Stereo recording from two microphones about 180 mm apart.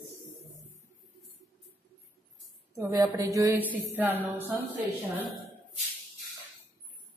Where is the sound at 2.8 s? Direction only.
20° right (ahead or behind).